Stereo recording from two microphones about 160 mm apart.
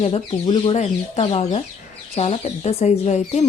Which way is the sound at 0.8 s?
40° left (ahead or behind).